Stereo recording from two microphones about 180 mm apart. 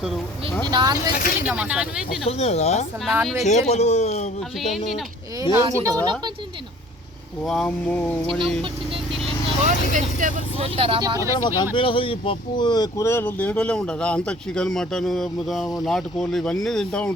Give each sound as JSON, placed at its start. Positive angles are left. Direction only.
{"t": 0.7, "sound": "speech", "side_deg": -25}
{"t": 1.1, "sound": "speech", "side_deg": 50}
{"t": 1.5, "sound": "speech", "side_deg": -5}
{"t": 2.4, "sound": "a man's voice", "side_deg": 35}
{"t": 3.1, "sound": "speech", "side_deg": 0}
{"t": 3.4, "sound": "a man's voice", "side_deg": 40}
{"t": 4.6, "sound": "speech", "side_deg": 0}
{"t": 5.4, "sound": "speech", "side_deg": -20}
{"t": 7.4, "sound": "speech", "side_deg": 5}
{"t": 9.9, "sound": "speech", "side_deg": -45}
{"t": 10.6, "sound": "speech", "side_deg": -30}
{"t": 11.4, "sound": "speech", "side_deg": 25}